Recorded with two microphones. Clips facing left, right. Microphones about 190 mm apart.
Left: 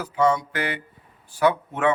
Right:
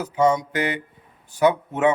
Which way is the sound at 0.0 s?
20° right (ahead or behind).